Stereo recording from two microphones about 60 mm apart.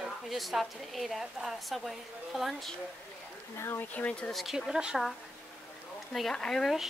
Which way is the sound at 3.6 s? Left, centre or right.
Left.